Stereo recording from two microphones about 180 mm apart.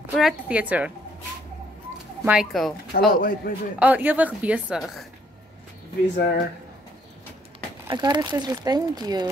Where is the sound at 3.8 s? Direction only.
10° right (ahead or behind).